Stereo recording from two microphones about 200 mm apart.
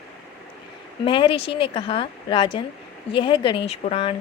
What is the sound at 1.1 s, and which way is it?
Speech, 25° left (ahead or behind).